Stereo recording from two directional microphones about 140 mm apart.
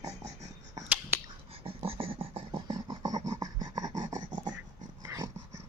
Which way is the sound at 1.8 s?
45° right (ahead or behind).